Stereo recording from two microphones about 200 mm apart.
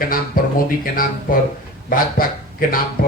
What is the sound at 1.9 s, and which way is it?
Speech, 45° left (ahead or behind).